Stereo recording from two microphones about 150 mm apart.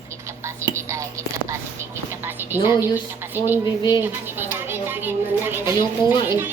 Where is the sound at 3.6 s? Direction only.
25° left (ahead or behind).